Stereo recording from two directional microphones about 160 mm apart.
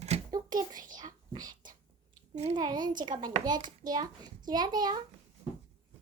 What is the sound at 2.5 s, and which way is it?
A child's voice, 25° right (ahead or behind).